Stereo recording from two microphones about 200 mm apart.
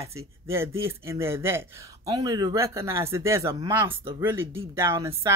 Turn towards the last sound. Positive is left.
turn(degrees=-15)  # may be behind; listen again after turning